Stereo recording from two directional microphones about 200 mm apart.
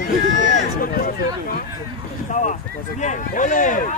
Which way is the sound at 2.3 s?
35° left (ahead or behind).